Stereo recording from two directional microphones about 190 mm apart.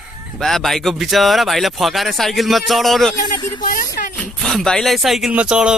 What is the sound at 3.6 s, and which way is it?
Speech, 50° left (ahead or behind).